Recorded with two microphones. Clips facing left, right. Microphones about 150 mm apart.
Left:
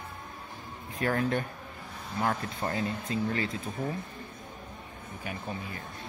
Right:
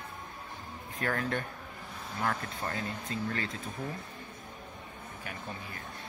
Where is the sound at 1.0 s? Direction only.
15° left (ahead or behind).